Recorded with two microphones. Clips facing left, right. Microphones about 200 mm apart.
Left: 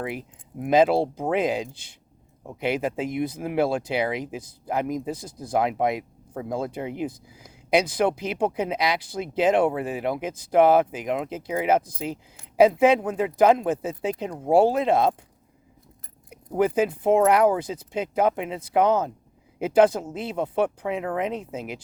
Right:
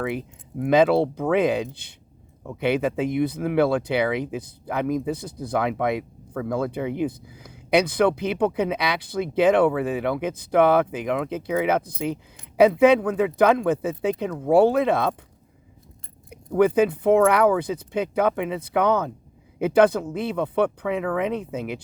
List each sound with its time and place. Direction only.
0.0 s speech: 65° right (ahead or behind)
16.3 s speech: 60° right (ahead or behind)